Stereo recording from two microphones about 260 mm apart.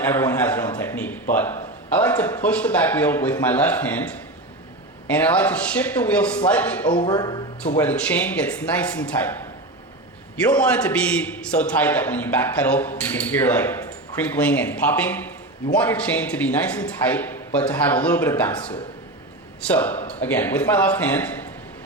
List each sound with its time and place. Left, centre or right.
0.0 s a sound: centre
2.0 s speech: centre
5.1 s speech: centre
7.0 s speech: centre
7.8 s speech: centre
10.4 s speech: centre
19.7 s speech: centre